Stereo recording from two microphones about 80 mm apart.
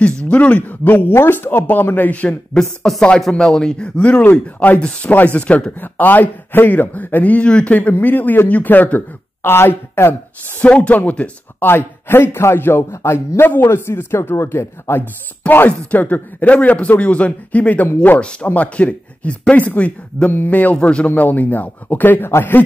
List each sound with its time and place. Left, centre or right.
0.0 s speech: centre; by 10.1 s left
10.6 s speech: centre